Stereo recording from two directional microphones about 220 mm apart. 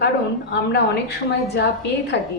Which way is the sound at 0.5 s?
50° left (ahead or behind).